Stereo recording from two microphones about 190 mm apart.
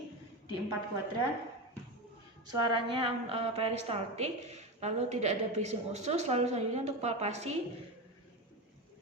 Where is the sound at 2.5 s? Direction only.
25° right (ahead or behind).